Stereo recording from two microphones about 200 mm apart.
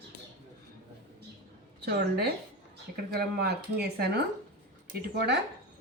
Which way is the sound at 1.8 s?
55° right (ahead or behind).